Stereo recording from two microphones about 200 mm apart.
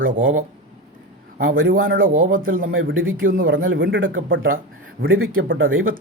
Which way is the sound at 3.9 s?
75° right (ahead or behind).